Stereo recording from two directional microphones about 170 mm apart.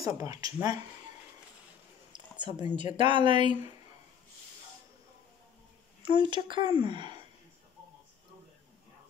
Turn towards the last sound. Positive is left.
turn(degrees=-25)  # may be behind; listen again after turning